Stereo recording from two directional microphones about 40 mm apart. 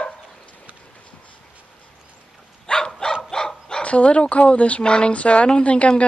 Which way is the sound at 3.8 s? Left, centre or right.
Left.